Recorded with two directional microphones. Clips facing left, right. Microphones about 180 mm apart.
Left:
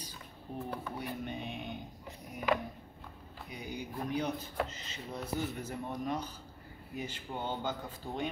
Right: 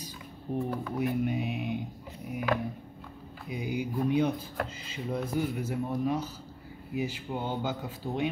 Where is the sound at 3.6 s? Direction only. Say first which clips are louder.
Right 9 dB; 10° right (ahead or behind).